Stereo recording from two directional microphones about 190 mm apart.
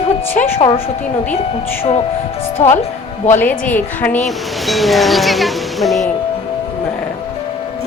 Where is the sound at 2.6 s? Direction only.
40° left (ahead or behind).